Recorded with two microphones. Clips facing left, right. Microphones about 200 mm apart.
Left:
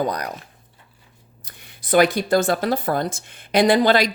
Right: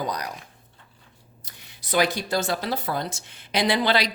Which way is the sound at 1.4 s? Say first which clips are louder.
Left 9 dB; 55° left (ahead or behind).